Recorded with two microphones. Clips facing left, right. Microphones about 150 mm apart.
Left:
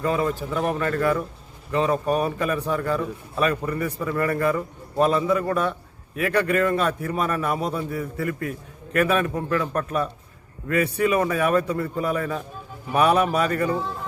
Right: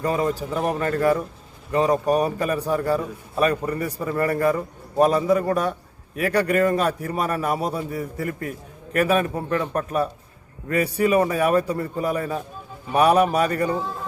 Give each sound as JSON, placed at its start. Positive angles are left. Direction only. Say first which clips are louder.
{"t": 0.0, "sound": "a man's voice", "louder": "right 1 dB", "side_deg": -40}
{"t": 13.7, "sound": "speech", "louder": "even", "side_deg": 0}